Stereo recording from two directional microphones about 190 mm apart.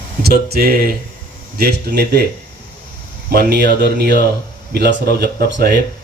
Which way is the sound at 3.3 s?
55° right (ahead or behind).